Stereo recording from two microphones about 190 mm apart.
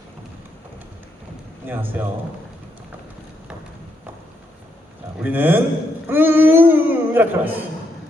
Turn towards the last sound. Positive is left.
turn(degrees=-10)  # may be behind; listen again after turning